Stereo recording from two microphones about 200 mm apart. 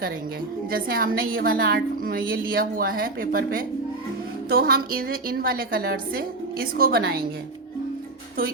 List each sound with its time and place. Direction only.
0.7 s a woman's voice: 45° right (ahead or behind)